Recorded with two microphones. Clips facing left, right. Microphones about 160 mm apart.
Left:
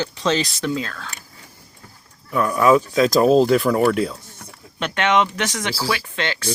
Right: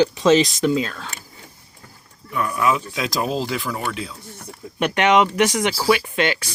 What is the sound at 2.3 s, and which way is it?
Speech, centre (ahead or behind).